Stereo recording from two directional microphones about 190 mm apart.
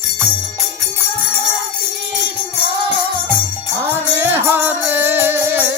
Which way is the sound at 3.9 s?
10° right (ahead or behind).